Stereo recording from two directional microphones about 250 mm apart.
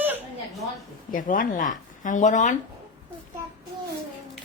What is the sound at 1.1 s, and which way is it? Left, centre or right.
Speech, left.